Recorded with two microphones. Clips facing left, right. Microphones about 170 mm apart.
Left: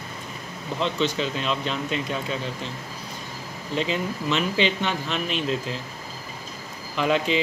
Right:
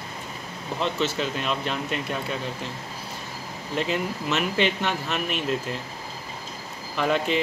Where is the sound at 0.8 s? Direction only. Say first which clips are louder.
Left 1 dB; 5° right (ahead or behind).